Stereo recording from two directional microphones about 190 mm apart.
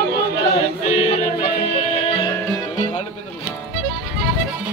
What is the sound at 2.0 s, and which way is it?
Music, 25° left (ahead or behind).